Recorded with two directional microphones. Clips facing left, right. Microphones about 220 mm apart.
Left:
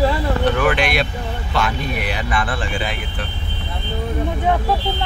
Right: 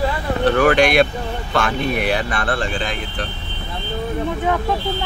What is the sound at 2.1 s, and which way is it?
Speech, 40° right (ahead or behind).